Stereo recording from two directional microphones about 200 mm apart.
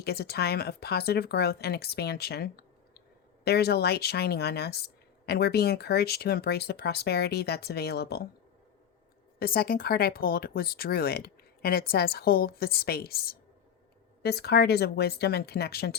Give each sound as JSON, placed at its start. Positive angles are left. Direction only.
{"t": 0.0, "sound": "speech", "side_deg": 50}
{"t": 9.4, "sound": "speech", "side_deg": 50}